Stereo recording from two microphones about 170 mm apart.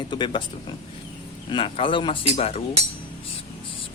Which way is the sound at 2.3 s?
40° left (ahead or behind).